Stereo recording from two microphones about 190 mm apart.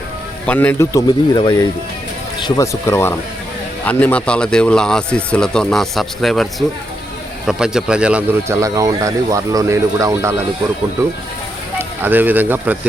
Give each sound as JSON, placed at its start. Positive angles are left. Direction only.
{"t": 0.4, "sound": "speech", "side_deg": 10}
{"t": 11.8, "sound": "speech", "side_deg": -10}